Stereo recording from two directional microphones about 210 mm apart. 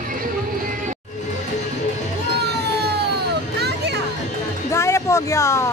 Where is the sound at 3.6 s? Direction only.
50° right (ahead or behind).